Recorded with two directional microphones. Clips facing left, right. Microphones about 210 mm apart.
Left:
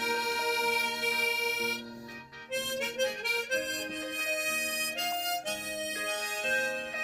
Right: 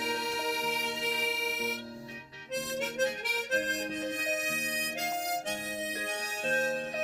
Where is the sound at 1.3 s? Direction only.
Centre (ahead or behind).